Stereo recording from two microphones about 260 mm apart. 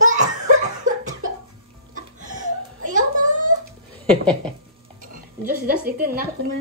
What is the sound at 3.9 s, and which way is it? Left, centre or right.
Speech, centre.